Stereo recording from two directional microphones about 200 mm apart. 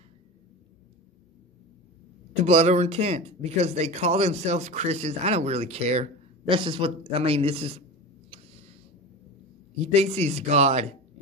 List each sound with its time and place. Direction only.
2.4 s speech: 30° right (ahead or behind)
9.9 s speech: 30° right (ahead or behind)